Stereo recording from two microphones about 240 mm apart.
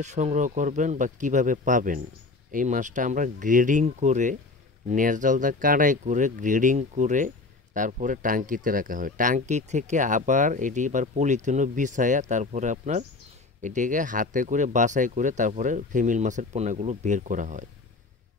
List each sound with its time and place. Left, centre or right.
0.0 s speech: right